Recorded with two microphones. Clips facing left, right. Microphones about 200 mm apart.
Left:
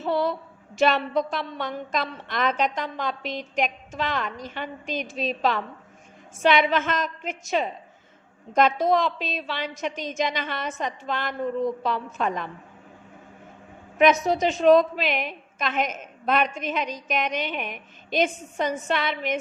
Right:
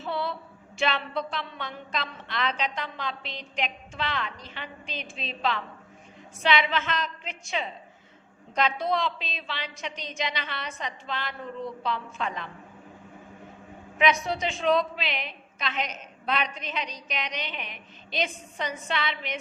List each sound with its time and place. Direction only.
0.0 s a sound: 45° left (ahead or behind)
0.8 s a woman's voice: 45° left (ahead or behind)
14.0 s a woman's voice: 45° left (ahead or behind)